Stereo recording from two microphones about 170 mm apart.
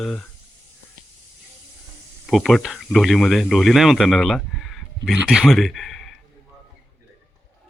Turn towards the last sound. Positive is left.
turn(degrees=0)  # may be behind; listen again after turning